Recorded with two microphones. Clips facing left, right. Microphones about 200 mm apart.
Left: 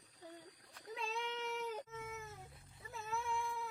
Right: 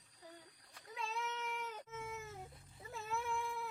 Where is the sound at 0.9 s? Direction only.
30° left (ahead or behind).